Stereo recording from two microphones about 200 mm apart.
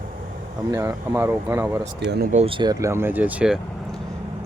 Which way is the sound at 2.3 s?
30° right (ahead or behind).